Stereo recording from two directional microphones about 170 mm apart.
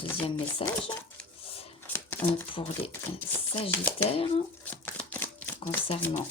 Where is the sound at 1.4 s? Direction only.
35° left (ahead or behind).